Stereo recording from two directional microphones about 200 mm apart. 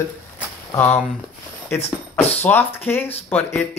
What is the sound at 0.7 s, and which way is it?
Speech, 10° left (ahead or behind).